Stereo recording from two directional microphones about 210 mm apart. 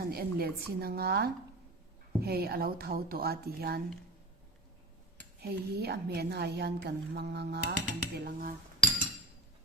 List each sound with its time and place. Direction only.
0.0 s a woman's voice: 45° right (ahead or behind)
5.4 s a woman's voice: 50° right (ahead or behind)
8.8 s chink: 5° left (ahead or behind)